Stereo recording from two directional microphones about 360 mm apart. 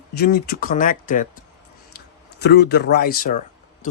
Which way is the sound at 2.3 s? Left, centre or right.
Left.